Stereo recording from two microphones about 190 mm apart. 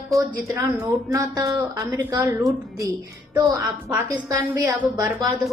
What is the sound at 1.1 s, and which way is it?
A woman's voice, 20° right (ahead or behind).